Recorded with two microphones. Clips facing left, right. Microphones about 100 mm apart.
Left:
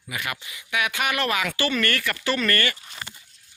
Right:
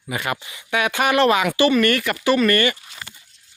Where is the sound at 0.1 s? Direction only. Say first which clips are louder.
Right 6 dB; 35° right (ahead or behind).